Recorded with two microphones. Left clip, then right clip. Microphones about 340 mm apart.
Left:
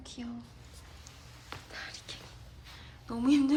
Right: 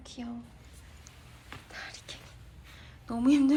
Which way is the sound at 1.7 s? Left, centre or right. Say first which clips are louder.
Right 1 dB; centre.